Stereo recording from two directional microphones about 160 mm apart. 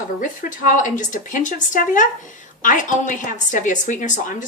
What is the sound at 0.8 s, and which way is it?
A woman's voice, 55° left (ahead or behind).